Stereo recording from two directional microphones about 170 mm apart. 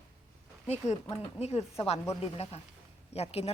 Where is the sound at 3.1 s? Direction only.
35° left (ahead or behind).